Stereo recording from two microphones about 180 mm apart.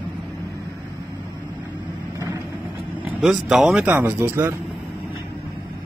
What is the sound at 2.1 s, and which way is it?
Vehicle, 15° right (ahead or behind).